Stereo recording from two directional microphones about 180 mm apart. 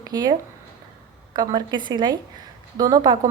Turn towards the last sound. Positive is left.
turn(degrees=-20)  # may be behind; listen again after turning